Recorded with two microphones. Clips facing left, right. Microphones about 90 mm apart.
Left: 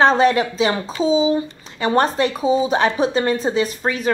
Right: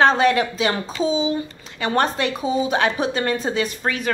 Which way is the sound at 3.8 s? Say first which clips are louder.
Left 2 dB; 15° left (ahead or behind).